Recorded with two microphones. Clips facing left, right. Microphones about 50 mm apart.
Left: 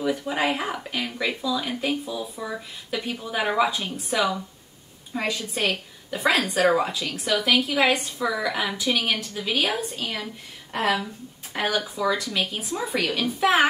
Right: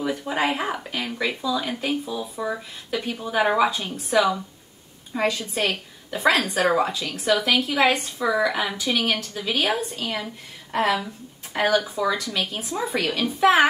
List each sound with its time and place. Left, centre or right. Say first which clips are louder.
0.2 s speech: right 1 dB; centre